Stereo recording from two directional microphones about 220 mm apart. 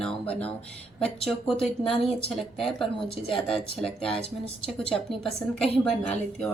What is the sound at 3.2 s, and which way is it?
Speech, 25° left (ahead or behind).